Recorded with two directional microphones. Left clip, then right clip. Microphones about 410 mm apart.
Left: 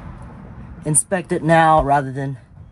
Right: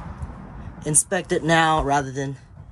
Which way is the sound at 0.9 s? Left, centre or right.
Centre.